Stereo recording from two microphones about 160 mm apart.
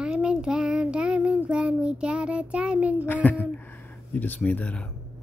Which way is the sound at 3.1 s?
10° left (ahead or behind).